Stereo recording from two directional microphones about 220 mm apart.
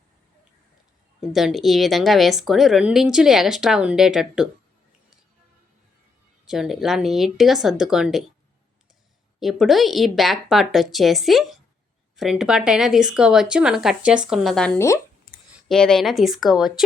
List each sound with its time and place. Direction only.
1.2 s a woman's voice: centre (ahead or behind)
6.4 s a woman's voice: centre (ahead or behind)
9.4 s a woman's voice: centre (ahead or behind)
15.7 s a woman's voice: centre (ahead or behind)